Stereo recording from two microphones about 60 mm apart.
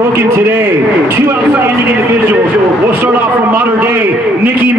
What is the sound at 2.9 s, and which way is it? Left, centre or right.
A man's voice, right.